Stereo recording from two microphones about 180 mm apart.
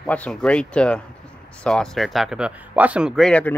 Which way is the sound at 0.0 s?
5° left (ahead or behind).